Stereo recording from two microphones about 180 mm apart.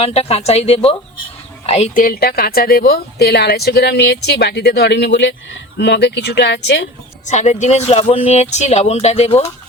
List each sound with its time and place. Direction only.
0.0 s a woman's voice: 35° left (ahead or behind)
2.0 s a woman's voice: 55° left (ahead or behind); by 6.8 s 75° left (ahead or behind)
7.3 s speech: 40° left (ahead or behind)